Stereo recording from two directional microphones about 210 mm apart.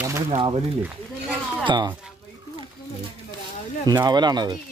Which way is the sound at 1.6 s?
20° right (ahead or behind).